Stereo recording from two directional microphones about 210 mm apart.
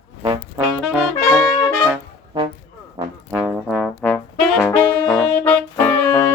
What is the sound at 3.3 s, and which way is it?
Trombone, centre (ahead or behind).